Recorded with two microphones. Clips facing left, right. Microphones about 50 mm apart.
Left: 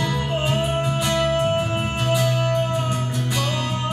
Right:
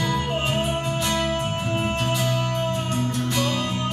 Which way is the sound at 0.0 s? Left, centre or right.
Centre.